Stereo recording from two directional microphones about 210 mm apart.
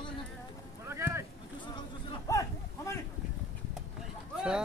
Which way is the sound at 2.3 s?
15° left (ahead or behind).